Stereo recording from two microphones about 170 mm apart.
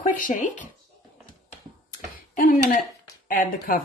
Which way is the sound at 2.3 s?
50° left (ahead or behind).